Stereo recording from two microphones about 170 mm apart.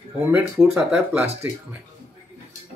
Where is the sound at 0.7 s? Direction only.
10° right (ahead or behind).